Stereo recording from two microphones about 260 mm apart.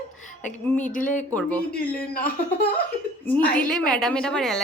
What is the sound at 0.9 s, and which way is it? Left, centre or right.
Speech, left.